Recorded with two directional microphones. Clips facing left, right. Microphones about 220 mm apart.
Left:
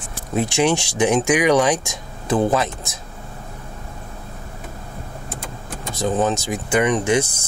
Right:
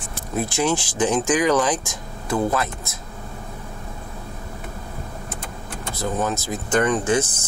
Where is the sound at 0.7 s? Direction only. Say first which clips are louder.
Left 3 dB; 65° left (ahead or behind).